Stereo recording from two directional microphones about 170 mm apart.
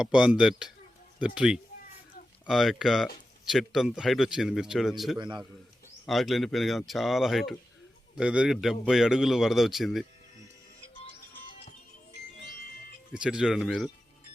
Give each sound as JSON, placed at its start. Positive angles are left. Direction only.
{"t": 0.0, "sound": "a man's voice", "side_deg": -5}
{"t": 5.1, "sound": "a man's voice", "side_deg": -25}
{"t": 6.1, "sound": "a man's voice", "side_deg": 0}
{"t": 13.1, "sound": "a man's voice", "side_deg": -5}